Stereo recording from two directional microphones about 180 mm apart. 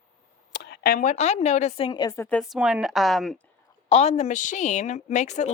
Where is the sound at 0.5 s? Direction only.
65° left (ahead or behind); by 2.4 s 10° left (ahead or behind).